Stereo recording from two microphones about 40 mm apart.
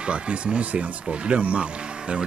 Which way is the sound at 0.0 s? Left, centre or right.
Right.